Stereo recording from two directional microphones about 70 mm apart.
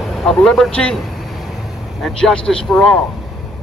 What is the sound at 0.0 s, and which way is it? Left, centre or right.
Speech, centre.